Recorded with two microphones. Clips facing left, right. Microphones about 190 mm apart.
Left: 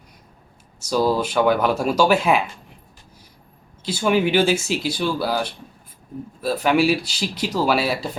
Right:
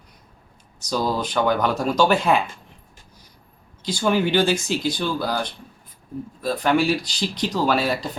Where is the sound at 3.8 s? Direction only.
5° left (ahead or behind).